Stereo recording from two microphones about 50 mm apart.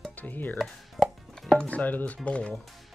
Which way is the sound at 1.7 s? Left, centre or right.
Left.